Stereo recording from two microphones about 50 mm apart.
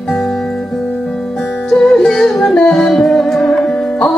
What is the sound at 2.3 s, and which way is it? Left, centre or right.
Yodeling, centre.